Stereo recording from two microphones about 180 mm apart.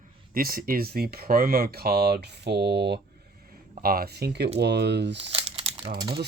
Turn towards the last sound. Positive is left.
turn(degrees=-65)  # may be behind; listen again after turning